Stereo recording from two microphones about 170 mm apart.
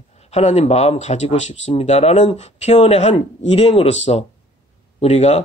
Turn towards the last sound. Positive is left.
turn(degrees=40)  # may be behind; listen again after turning